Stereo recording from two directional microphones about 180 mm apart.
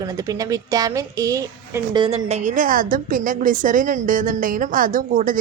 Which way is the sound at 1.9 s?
30° right (ahead or behind).